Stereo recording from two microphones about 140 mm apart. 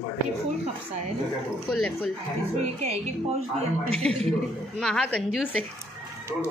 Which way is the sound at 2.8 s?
45° right (ahead or behind).